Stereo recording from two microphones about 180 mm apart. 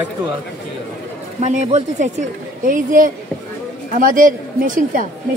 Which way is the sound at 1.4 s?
40° right (ahead or behind).